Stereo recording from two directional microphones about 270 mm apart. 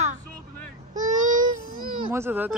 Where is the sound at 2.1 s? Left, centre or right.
Centre.